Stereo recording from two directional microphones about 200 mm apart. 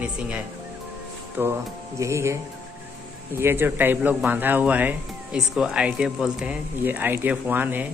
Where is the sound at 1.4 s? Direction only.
15° right (ahead or behind).